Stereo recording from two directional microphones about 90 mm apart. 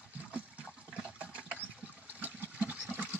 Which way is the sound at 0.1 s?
15° right (ahead or behind).